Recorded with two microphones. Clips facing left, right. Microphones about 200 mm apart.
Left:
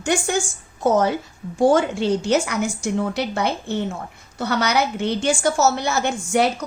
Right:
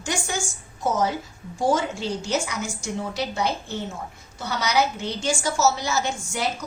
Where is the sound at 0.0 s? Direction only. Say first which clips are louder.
Left 7 dB; 55° left (ahead or behind).